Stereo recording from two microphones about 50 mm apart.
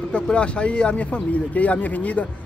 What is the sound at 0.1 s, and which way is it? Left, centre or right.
Speech, left.